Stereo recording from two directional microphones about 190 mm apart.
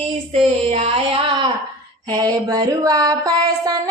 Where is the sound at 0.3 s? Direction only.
30° right (ahead or behind).